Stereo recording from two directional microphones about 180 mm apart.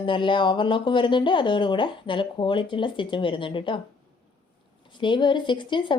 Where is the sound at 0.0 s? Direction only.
25° left (ahead or behind).